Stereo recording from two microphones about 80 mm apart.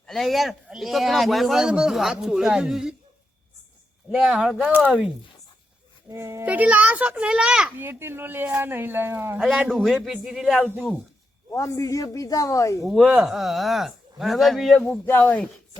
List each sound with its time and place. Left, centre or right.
0.1 s a man's voice: centre
4.1 s a child's voice: centre
6.1 s a child's voice: right
6.4 s a child's voice: centre
7.8 s speech: right
9.6 s a man's voice: centre
11.5 s speech: left
12.8 s a man's voice: centre
14.8 s speech: left